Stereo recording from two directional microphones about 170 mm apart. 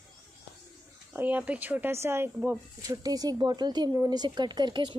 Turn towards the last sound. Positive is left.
turn(degrees=-25)  # may be behind; listen again after turning